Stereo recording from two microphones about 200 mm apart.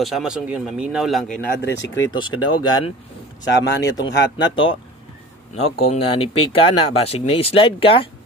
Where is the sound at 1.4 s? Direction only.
55° left (ahead or behind).